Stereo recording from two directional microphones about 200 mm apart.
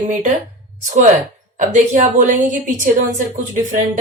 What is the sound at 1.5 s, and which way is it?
Speech, 40° right (ahead or behind).